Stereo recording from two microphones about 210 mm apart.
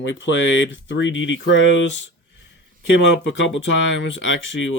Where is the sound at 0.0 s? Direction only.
60° left (ahead or behind).